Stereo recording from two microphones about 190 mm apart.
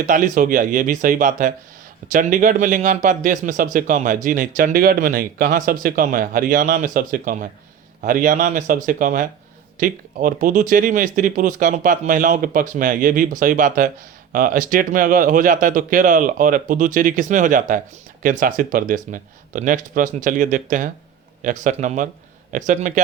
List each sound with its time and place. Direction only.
0.0 s a man's voice: 45° right (ahead or behind)